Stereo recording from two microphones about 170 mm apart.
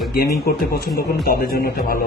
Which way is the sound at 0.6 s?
65° left (ahead or behind).